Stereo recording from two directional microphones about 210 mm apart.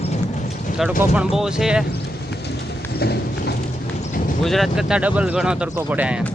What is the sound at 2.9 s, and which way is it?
Clip-clop, 50° left (ahead or behind).